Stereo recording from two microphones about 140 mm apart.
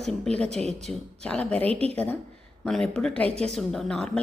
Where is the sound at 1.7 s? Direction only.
45° right (ahead or behind).